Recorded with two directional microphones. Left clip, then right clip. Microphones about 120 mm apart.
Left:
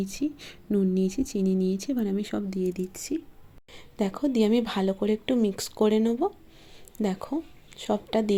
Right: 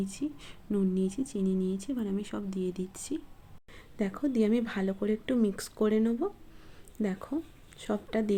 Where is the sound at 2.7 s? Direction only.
25° left (ahead or behind).